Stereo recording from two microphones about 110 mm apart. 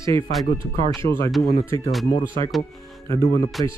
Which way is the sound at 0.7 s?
30° left (ahead or behind).